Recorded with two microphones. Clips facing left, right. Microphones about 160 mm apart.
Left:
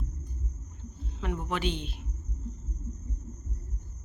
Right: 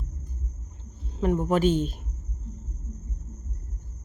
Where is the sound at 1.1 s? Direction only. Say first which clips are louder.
Right 10 dB; 40° right (ahead or behind).